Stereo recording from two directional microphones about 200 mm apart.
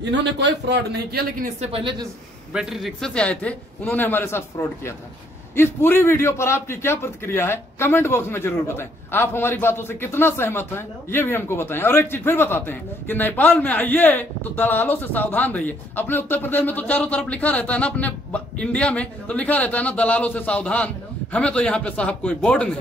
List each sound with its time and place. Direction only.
0.0 s a man's voice: 60° right (ahead or behind)
1.4 s speech: 30° right (ahead or behind)
2.5 s a man's voice: centre (ahead or behind)